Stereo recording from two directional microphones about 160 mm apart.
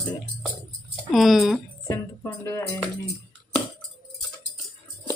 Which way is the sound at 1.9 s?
15° left (ahead or behind).